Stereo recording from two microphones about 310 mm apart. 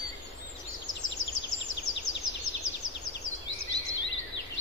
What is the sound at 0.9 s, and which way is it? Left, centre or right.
Bird vocalization, left.